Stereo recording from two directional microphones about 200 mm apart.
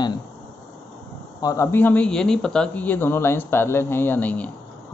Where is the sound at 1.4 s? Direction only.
15° left (ahead or behind).